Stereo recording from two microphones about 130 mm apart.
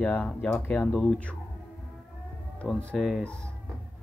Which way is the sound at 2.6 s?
Centre (ahead or behind).